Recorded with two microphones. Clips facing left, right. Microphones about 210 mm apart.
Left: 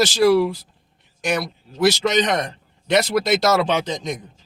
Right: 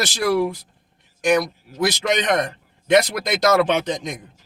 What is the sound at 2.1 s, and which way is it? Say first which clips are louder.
Speech: left 1 dB; 50° right (ahead or behind).